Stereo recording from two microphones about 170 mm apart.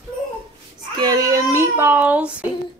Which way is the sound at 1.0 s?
20° right (ahead or behind).